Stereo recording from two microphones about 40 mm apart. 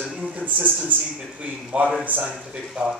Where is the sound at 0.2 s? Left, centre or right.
Right.